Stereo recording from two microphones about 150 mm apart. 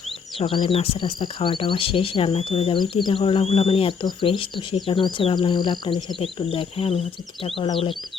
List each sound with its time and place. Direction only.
0.3 s speech: 35° left (ahead or behind)